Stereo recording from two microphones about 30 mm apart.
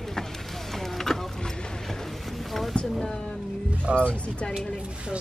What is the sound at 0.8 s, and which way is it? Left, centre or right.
Vehicle, centre.